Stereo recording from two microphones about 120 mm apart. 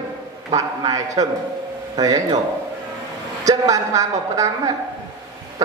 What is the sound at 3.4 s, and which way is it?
A man's voice, 30° right (ahead or behind).